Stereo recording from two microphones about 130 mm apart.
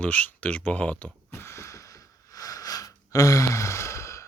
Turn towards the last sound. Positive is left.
turn(degrees=20)  # may be behind; listen again after turning